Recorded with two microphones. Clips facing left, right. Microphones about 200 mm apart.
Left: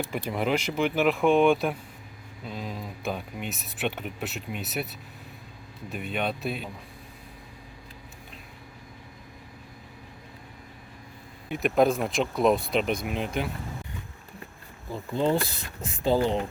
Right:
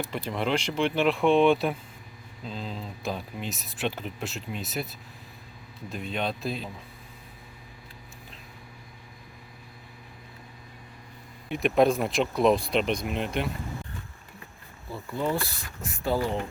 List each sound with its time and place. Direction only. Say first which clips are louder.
0.3 s speech: left 1 dB; 10° left (ahead or behind)
11.4 s speech: even; centre (ahead or behind)
14.9 s speech: left 4 dB; 25° left (ahead or behind)